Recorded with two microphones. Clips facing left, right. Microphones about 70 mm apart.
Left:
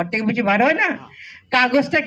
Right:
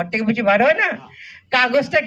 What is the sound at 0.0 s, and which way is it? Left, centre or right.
Speech, centre.